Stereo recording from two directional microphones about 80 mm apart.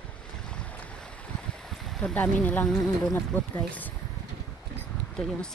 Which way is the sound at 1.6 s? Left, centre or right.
Centre.